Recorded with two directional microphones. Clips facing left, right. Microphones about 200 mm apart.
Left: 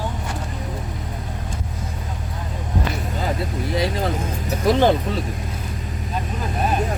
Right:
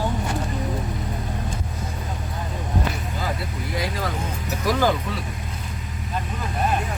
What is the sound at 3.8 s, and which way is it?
Speech, 25° left (ahead or behind).